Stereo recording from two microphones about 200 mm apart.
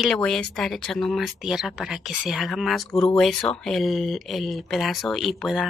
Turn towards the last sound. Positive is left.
turn(degrees=0)  # may be behind; listen again after turning